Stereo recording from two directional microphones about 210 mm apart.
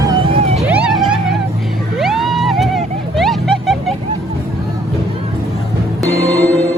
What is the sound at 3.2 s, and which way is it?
Music, centre (ahead or behind).